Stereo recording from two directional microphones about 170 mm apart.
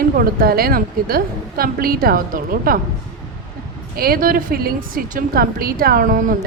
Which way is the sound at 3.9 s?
60° right (ahead or behind).